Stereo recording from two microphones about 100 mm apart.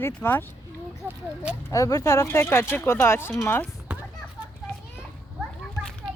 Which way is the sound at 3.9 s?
15° right (ahead or behind).